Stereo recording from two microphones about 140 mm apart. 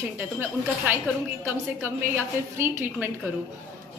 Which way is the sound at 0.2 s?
15° right (ahead or behind).